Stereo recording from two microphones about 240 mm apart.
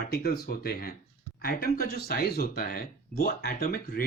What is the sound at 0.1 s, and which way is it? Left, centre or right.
Speech, left.